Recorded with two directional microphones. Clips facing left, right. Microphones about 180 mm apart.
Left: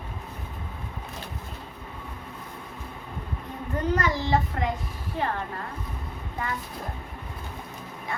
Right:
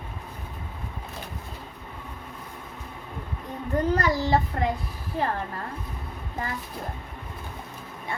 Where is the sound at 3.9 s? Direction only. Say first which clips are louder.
Even; 35° right (ahead or behind).